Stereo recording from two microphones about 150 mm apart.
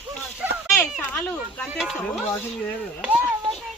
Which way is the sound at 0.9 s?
10° left (ahead or behind).